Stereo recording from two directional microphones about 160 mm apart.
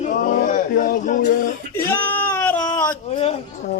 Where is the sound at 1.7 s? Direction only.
15° left (ahead or behind).